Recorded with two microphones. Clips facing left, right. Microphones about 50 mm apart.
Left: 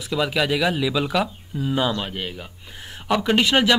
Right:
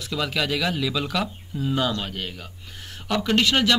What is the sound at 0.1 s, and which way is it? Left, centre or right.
Speech, centre.